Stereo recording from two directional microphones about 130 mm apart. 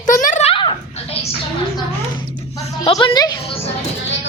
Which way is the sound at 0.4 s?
40° left (ahead or behind).